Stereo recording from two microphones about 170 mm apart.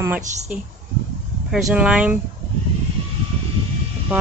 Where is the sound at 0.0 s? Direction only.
10° right (ahead or behind).